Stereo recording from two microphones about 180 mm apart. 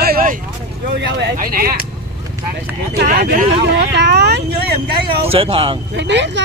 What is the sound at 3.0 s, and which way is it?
Speech, 50° right (ahead or behind).